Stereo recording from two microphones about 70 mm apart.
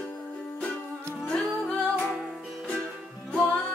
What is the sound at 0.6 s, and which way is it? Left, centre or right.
Music, centre.